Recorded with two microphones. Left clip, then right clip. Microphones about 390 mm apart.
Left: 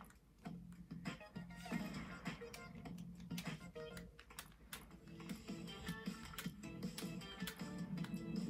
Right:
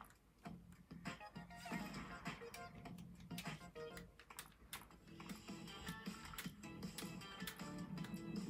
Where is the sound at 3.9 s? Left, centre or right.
Centre.